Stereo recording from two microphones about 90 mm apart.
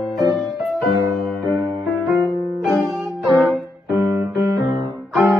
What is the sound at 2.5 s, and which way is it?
Music, centre (ahead or behind).